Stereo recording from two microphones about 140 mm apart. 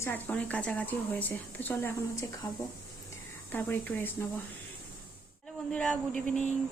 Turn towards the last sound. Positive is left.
turn(degrees=5)  # may be behind; listen again after turning